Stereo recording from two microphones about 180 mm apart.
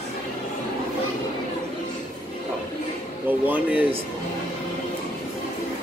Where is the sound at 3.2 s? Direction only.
10° right (ahead or behind).